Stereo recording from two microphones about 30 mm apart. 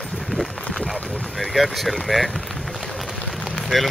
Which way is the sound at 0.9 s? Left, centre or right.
Centre.